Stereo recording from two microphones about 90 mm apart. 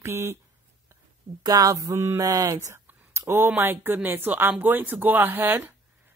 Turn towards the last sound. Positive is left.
turn(degrees=-25)  # may be behind; listen again after turning